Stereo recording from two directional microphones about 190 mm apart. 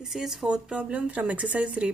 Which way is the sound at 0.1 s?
Centre (ahead or behind).